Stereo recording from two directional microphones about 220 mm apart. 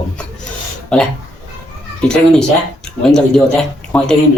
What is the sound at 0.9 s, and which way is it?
Speech, 5° left (ahead or behind).